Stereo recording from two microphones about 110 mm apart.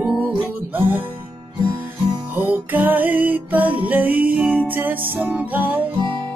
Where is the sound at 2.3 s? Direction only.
15° right (ahead or behind).